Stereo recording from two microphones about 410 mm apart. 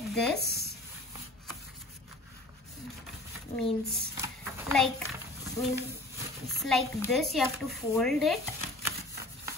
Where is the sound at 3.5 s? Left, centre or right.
Centre.